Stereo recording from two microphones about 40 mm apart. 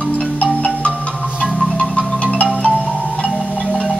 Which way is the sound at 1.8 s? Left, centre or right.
Left.